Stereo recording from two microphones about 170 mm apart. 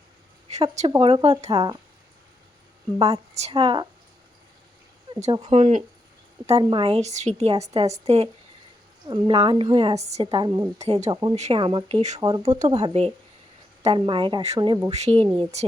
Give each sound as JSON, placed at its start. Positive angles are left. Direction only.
{"t": 0.5, "sound": "a woman's voice", "side_deg": -40}
{"t": 0.9, "sound": "a woman's voice", "side_deg": -30}
{"t": 1.5, "sound": "a woman's voice", "side_deg": -25}
{"t": 3.0, "sound": "a woman's voice", "side_deg": -35}
{"t": 5.4, "sound": "a woman's voice", "side_deg": -40}
{"t": 6.5, "sound": "a woman's voice", "side_deg": -30}
{"t": 10.3, "sound": "a woman's voice", "side_deg": -25}
{"t": 10.8, "sound": "a woman's voice", "side_deg": -40}
{"t": 11.1, "sound": "a woman's voice", "side_deg": -25}
{"t": 11.3, "sound": "a woman's voice", "side_deg": -35}
{"t": 12.2, "sound": "a woman's voice", "side_deg": -25}